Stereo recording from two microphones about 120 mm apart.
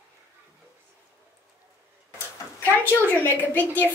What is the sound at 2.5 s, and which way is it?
A woman's voice, 20° left (ahead or behind).